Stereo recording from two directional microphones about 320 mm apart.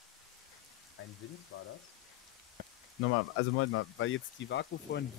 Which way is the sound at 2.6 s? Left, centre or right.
Right.